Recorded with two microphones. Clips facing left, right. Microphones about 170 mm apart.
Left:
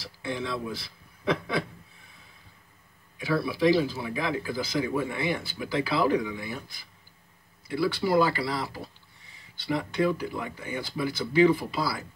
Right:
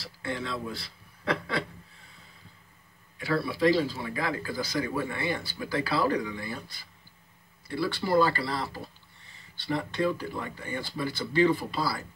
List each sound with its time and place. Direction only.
0.2 s speech: 15° left (ahead or behind)
3.2 s speech: 15° left (ahead or behind)
7.6 s speech: 15° left (ahead or behind)